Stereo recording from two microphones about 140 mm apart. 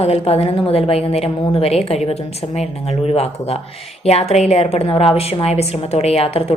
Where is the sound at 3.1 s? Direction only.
45° left (ahead or behind).